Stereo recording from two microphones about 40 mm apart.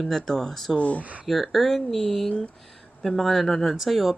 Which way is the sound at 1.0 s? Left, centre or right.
Right.